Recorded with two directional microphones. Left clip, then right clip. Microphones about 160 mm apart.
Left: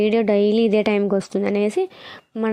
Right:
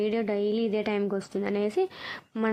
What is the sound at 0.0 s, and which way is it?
Speech, 40° left (ahead or behind).